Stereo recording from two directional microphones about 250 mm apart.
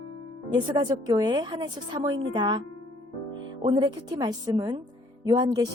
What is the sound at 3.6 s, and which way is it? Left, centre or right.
A woman's voice, centre.